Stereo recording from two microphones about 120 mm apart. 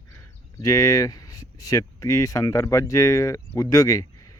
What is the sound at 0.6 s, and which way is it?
Speech, 30° left (ahead or behind).